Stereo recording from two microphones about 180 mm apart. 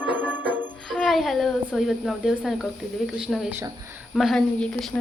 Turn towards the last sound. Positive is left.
turn(degrees=0)  # may be behind; listen again after turning